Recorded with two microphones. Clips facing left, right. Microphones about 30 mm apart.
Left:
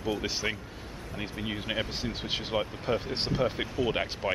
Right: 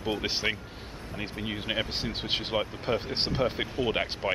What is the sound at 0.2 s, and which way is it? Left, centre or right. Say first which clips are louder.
Speech: right 2 dB; right.